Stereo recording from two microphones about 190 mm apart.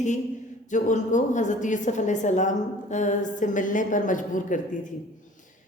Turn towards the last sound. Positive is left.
turn(degrees=45)  # may be behind; listen again after turning